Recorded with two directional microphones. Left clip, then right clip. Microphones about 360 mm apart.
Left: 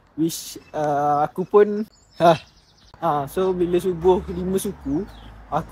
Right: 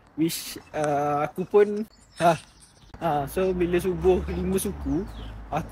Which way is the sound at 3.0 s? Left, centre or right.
Centre.